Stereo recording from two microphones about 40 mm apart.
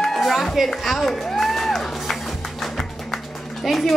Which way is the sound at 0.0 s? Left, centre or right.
Centre.